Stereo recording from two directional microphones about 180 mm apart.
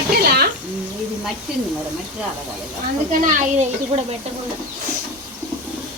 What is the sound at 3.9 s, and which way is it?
Speech, 30° right (ahead or behind).